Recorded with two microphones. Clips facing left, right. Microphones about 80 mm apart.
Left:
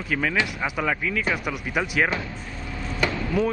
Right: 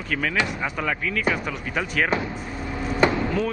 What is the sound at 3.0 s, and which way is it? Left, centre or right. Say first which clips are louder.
Chop: right 5 dB; right.